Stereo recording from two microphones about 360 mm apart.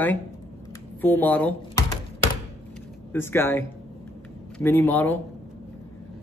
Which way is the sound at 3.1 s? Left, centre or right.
Centre.